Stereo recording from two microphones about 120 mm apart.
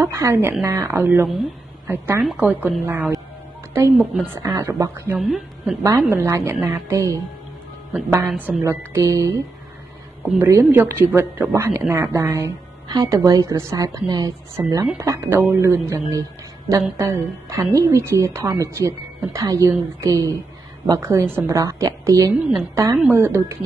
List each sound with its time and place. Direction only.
0.0 s a woman's voice: 25° right (ahead or behind)
3.7 s a woman's voice: 20° right (ahead or behind)
4.4 s speech: 30° right (ahead or behind)
5.2 s a woman's voice: centre (ahead or behind)
5.8 s speech: 25° right (ahead or behind)
8.4 s speech: 15° right (ahead or behind)
10.2 s a woman's voice: 10° right (ahead or behind); by 14.3 s 30° right (ahead or behind)
14.5 s speech: 20° right (ahead or behind)